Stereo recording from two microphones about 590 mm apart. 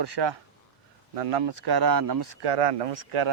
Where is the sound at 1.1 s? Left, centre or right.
Right.